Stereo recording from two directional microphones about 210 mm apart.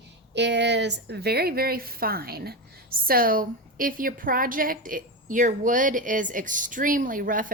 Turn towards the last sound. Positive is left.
turn(degrees=-40)  # may be behind; listen again after turning